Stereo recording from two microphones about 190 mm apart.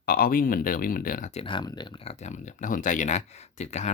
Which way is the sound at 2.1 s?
40° left (ahead or behind).